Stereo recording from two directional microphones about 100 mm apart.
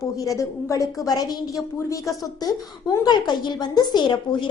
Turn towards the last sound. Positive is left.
turn(degrees=50)  # may be behind; listen again after turning